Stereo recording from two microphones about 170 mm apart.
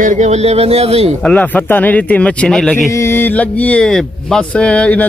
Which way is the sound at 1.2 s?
10° left (ahead or behind).